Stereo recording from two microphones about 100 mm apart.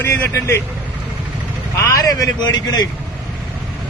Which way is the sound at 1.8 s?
35° left (ahead or behind).